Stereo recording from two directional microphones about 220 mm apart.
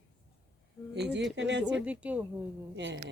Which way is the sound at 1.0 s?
50° right (ahead or behind).